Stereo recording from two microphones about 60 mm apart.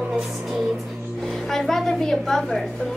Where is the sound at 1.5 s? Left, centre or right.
Centre.